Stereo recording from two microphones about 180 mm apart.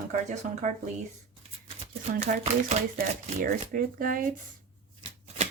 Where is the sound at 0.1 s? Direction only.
45° right (ahead or behind).